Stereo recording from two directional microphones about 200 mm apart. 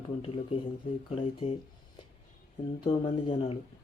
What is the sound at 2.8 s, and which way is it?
Speech, 25° left (ahead or behind).